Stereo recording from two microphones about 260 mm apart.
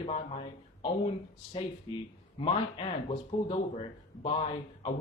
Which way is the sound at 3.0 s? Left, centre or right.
Left.